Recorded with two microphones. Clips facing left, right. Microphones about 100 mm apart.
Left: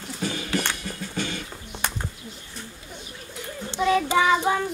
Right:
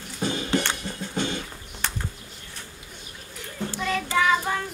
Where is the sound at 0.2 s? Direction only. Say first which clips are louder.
Right 2 dB; 25° right (ahead or behind).